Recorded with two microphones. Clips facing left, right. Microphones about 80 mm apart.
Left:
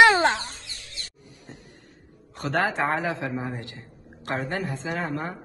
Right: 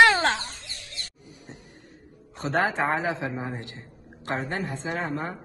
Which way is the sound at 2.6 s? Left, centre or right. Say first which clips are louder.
Even; right.